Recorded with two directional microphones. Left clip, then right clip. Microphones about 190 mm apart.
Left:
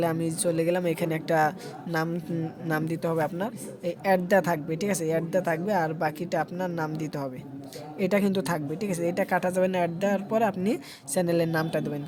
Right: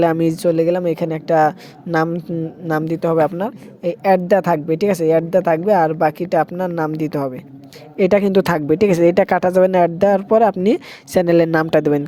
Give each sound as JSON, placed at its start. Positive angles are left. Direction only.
{"t": 0.0, "sound": "a woman's voice", "side_deg": -40}